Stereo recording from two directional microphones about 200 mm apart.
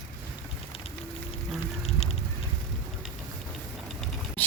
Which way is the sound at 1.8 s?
30° left (ahead or behind).